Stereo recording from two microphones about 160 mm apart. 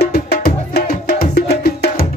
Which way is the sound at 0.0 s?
75° left (ahead or behind).